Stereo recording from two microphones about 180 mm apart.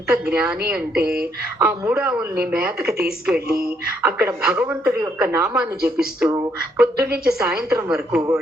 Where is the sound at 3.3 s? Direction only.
60° right (ahead or behind).